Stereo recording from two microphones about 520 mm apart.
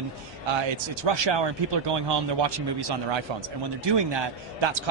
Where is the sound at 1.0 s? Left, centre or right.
Right.